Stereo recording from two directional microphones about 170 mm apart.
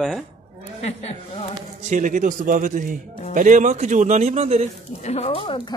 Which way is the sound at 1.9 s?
45° right (ahead or behind).